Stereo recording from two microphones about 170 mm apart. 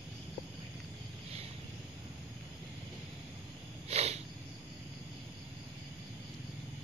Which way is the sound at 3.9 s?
40° right (ahead or behind).